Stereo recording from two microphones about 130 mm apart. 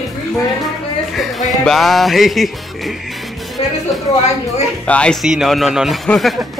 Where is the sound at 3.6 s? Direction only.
45° left (ahead or behind).